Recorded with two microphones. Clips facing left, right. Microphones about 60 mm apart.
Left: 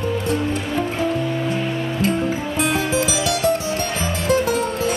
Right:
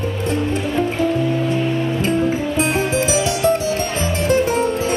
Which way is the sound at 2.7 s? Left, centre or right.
Right.